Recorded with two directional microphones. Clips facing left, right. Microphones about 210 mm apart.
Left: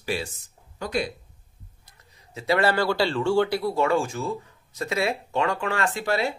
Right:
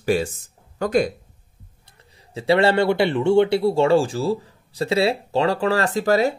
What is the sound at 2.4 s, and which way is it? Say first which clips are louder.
Speech: right 5 dB; 30° right (ahead or behind).